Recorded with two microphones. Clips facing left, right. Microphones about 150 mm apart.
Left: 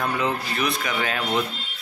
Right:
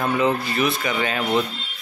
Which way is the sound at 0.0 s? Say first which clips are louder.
Right 4 dB; centre (ahead or behind).